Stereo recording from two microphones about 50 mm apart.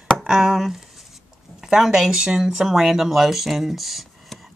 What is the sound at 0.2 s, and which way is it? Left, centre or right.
Speech, centre.